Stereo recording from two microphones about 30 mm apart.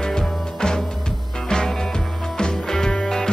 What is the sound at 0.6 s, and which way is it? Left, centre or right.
Music, left.